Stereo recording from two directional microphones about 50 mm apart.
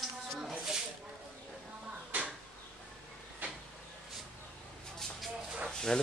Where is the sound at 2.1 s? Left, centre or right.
Right.